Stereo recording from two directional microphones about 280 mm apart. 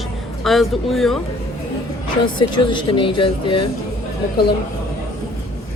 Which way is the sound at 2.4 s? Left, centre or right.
Centre.